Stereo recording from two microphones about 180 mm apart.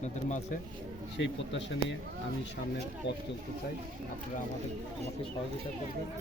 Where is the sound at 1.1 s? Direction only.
90° left.